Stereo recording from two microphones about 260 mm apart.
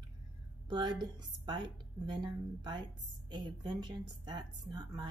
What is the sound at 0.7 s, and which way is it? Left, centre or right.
A woman's voice, centre.